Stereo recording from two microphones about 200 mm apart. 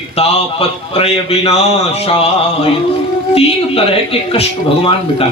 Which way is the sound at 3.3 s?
30° left (ahead or behind).